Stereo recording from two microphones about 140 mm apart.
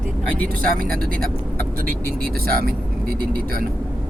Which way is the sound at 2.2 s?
90° right.